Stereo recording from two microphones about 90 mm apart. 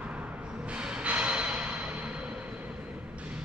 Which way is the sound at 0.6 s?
10° right (ahead or behind).